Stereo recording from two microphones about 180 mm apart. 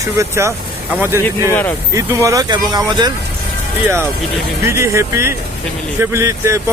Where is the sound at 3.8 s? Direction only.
10° right (ahead or behind).